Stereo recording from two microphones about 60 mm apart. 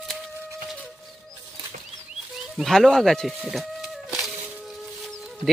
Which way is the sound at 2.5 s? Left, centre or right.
Centre.